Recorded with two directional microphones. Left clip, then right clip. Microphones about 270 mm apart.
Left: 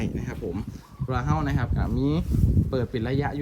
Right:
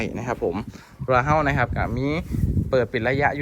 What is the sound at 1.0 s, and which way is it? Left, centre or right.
Speech, centre.